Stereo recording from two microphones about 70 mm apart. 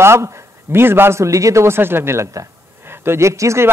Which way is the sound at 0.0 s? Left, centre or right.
Right.